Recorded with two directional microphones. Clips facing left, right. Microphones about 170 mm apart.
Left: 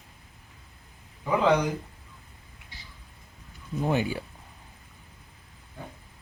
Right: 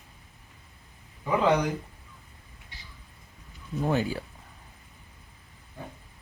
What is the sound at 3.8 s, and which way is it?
Speech, 15° left (ahead or behind).